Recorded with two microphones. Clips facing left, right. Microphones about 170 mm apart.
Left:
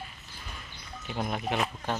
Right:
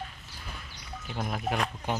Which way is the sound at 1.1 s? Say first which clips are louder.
Left 1 dB; centre (ahead or behind).